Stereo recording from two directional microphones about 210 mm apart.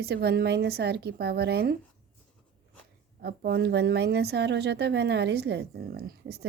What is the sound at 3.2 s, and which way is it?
A woman's voice, 50° right (ahead or behind).